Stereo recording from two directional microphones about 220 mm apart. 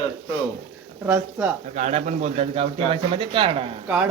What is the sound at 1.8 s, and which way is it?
Speech, 30° right (ahead or behind).